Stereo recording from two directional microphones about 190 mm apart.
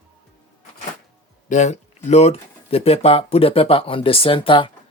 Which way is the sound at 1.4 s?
40° left (ahead or behind).